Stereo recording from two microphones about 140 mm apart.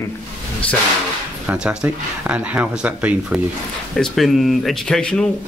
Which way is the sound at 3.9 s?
Centre (ahead or behind).